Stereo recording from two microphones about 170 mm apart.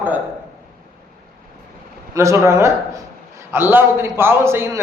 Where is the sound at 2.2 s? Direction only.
15° right (ahead or behind).